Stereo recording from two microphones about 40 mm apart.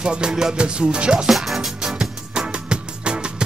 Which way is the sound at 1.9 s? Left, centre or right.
Right.